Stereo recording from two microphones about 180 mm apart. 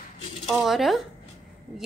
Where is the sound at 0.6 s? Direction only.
Centre (ahead or behind).